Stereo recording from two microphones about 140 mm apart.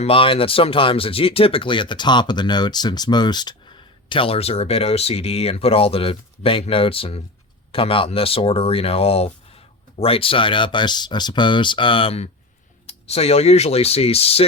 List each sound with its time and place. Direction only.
0.0 s speech: 40° left (ahead or behind)